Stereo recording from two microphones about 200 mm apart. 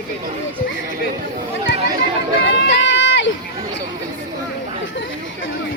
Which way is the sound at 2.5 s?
70° left (ahead or behind).